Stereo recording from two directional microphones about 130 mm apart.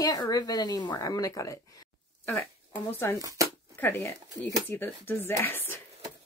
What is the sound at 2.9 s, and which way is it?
A woman's voice, 20° left (ahead or behind).